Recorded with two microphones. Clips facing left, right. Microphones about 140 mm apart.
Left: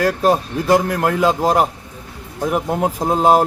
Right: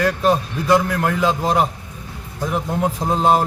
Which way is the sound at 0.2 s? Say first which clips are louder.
Left 2 dB; 50° left (ahead or behind).